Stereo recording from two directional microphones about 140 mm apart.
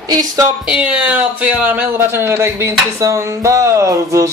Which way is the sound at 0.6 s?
5° right (ahead or behind).